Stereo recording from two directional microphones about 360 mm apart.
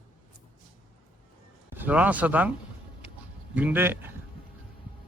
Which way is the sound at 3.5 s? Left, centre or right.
Centre.